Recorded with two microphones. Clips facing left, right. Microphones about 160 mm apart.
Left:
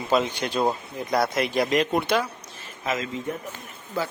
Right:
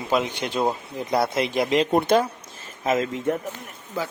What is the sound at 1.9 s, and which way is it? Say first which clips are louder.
Speech: right 8 dB; 45° right (ahead or behind).